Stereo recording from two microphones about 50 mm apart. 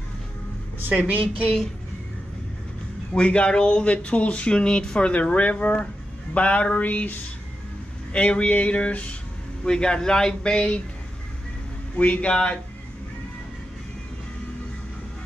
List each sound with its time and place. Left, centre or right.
0.7 s speech: right
3.2 s speech: left
6.3 s a sound: left
8.1 s speech: left
9.7 s speech: centre
12.0 s speech: left